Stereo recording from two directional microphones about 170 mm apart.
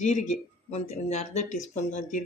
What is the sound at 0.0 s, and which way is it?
Speech, 45° left (ahead or behind).